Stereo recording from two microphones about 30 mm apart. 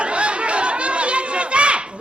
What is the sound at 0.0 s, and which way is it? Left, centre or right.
Chatter, right.